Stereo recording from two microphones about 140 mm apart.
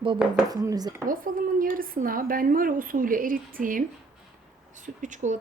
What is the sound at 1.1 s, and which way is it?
Speech, 85° right.